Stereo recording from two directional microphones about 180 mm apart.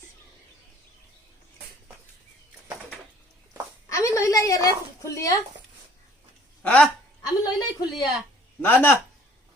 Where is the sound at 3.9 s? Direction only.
15° left (ahead or behind).